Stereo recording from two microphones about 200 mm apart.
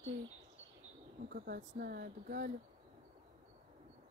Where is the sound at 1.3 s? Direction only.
50° right (ahead or behind).